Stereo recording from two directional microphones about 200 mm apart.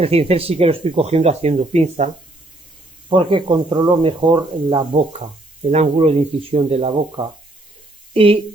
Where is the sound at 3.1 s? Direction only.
25° right (ahead or behind).